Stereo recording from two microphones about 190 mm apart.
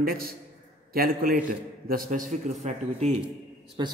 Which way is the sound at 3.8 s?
25° right (ahead or behind).